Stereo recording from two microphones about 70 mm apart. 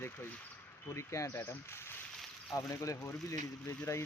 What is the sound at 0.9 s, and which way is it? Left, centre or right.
Speech, left.